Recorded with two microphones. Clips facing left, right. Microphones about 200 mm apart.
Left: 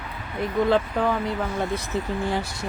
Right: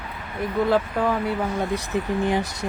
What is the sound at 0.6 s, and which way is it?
Speech, 5° right (ahead or behind).